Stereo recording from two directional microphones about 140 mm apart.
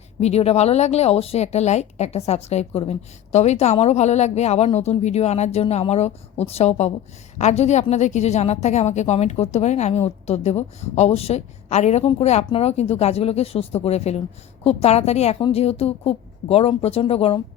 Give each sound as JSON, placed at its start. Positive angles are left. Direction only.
{"t": 0.2, "sound": "speech", "side_deg": 50}